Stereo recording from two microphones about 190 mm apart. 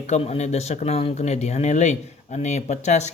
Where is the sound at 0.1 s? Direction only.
35° left (ahead or behind).